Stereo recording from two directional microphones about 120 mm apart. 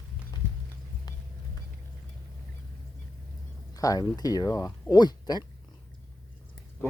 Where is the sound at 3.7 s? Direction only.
30° left (ahead or behind).